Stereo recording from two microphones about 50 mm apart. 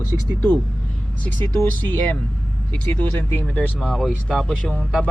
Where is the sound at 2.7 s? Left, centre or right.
Left.